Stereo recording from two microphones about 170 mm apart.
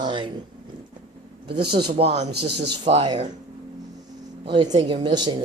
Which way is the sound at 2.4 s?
80° right.